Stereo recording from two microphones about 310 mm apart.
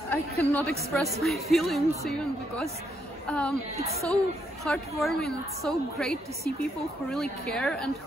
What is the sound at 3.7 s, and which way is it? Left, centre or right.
Speech, centre.